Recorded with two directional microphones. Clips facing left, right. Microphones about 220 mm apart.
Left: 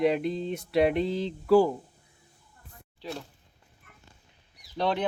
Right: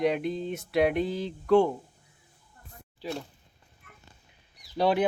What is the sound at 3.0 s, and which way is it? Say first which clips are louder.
Speech: right 3 dB; centre (ahead or behind).